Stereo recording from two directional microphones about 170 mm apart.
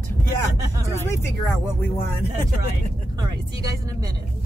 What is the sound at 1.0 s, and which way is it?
Speech, 15° left (ahead or behind).